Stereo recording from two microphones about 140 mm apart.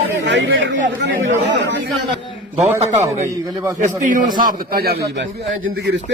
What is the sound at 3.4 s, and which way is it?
Speech, 25° right (ahead or behind).